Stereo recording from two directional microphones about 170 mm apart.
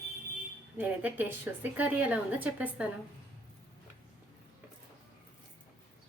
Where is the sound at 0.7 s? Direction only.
10° right (ahead or behind).